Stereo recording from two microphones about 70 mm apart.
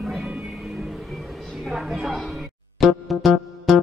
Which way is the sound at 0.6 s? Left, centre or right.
Centre.